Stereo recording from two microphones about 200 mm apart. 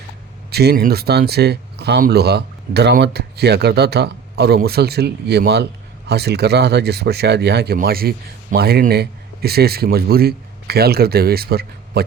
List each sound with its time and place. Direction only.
0.5 s speech: 50° right (ahead or behind)